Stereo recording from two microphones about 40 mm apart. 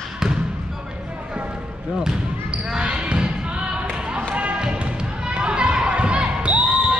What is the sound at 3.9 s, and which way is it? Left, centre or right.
Basketball bounce, right.